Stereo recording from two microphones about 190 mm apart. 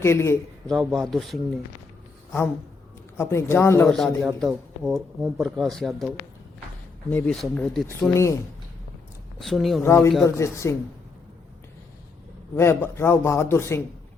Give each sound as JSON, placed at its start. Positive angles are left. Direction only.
{"t": 0.0, "sound": "a man's voice", "side_deg": 15}
{"t": 0.7, "sound": "speech", "side_deg": 0}
{"t": 3.2, "sound": "a man's voice", "side_deg": 15}
{"t": 3.8, "sound": "speech", "side_deg": 0}
{"t": 7.1, "sound": "speech", "side_deg": 5}
{"t": 8.1, "sound": "a man's voice", "side_deg": 15}
{"t": 9.4, "sound": "speech", "side_deg": 0}
{"t": 9.8, "sound": "a man's voice", "side_deg": 15}
{"t": 12.5, "sound": "a man's voice", "side_deg": 10}